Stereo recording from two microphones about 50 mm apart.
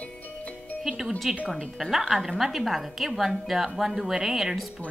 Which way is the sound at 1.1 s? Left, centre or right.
Centre.